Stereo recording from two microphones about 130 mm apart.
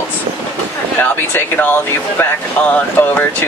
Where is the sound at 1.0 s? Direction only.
15° left (ahead or behind).